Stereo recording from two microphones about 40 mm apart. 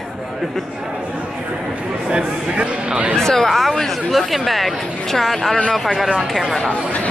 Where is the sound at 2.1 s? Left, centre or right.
Right.